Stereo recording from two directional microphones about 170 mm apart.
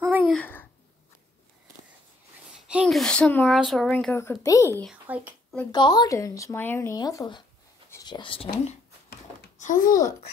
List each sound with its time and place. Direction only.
0.0 s a sound: 5° right (ahead or behind)
2.7 s speech: 5° right (ahead or behind); by 4.8 s 20° left (ahead or behind)
5.0 s speech: 10° right (ahead or behind)
5.7 s speech: 25° left (ahead or behind)
9.6 s speech: 50° left (ahead or behind)